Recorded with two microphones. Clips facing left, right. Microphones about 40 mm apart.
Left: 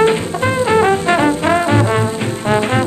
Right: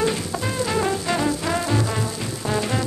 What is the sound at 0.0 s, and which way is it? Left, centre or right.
Music, left.